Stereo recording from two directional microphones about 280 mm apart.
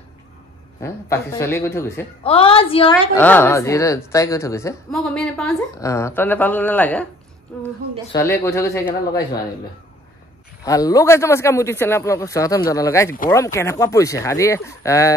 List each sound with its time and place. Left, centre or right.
0.7 s a man's voice: centre
2.2 s a woman's voice: centre
3.2 s a man's voice: centre
10.6 s a man's voice: centre